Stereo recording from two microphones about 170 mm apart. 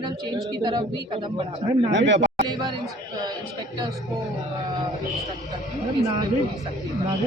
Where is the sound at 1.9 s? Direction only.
90° right.